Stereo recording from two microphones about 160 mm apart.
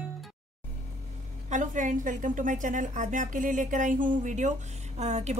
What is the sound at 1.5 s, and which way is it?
A woman's voice, 50° right (ahead or behind).